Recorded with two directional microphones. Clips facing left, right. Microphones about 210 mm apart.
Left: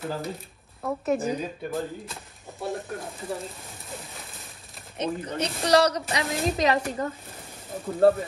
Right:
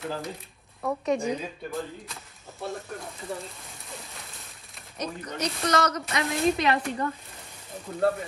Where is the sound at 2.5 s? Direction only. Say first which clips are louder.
Left 3 dB; 15° left (ahead or behind).